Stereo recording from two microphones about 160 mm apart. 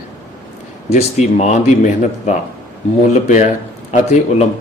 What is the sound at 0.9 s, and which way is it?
Speech, 40° left (ahead or behind).